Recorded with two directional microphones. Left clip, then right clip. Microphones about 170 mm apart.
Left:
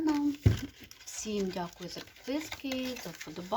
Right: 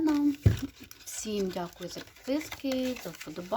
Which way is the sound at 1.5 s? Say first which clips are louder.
Right 2 dB; 20° right (ahead or behind).